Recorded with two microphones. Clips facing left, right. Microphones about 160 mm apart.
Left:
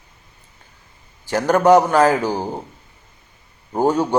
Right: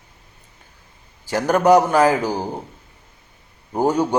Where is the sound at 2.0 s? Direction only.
10° right (ahead or behind).